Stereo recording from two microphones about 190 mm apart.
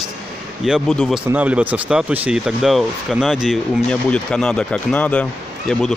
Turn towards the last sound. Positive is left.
turn(degrees=5)  # may be behind; listen again after turning